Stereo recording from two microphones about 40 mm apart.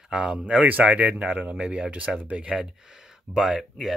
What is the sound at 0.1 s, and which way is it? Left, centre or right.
Speech, right.